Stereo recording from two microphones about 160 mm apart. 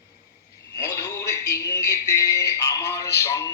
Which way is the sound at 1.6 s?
20° left (ahead or behind).